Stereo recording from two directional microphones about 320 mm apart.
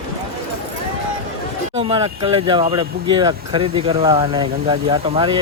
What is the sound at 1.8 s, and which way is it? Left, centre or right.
Speech, centre.